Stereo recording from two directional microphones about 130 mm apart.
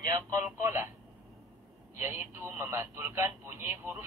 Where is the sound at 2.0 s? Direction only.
20° right (ahead or behind).